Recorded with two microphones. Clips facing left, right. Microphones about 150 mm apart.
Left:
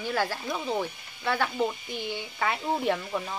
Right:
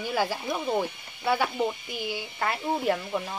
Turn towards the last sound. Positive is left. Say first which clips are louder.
# right 1 dB
turn(degrees=-5)  # may be behind; listen again after turning